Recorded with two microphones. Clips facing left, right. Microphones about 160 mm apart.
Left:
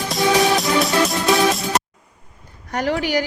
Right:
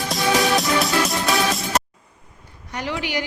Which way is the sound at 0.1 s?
Centre (ahead or behind).